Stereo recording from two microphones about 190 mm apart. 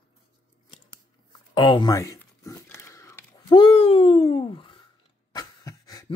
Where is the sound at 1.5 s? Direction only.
25° left (ahead or behind).